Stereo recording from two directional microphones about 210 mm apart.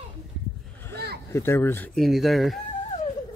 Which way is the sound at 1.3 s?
10° left (ahead or behind).